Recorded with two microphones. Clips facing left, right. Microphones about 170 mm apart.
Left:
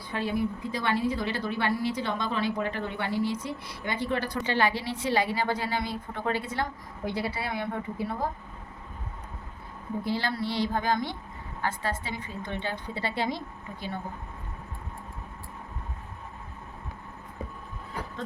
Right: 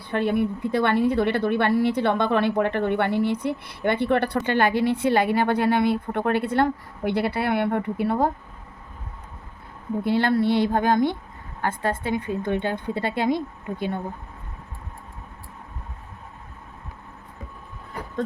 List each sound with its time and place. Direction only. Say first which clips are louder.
0.1 s a woman's voice: right 6 dB; 60° right (ahead or behind)
10.0 s a woman's voice: right 9 dB; 60° right (ahead or behind)